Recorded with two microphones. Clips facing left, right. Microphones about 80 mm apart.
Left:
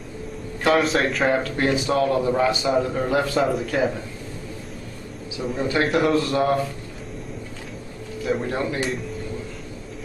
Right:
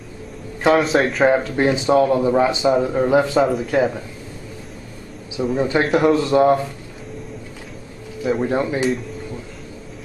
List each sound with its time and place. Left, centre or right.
0.7 s a man's voice: centre
1.3 s a man's voice: centre
3.3 s a man's voice: centre
5.6 s a man's voice: centre
5.9 s a man's voice: centre
6.1 s a man's voice: centre
8.5 s a man's voice: centre